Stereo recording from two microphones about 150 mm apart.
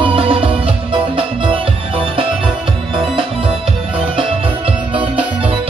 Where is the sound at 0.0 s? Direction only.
40° right (ahead or behind).